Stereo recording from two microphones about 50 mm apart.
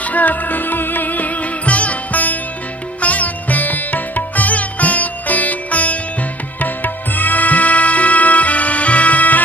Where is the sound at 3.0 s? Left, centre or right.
Left.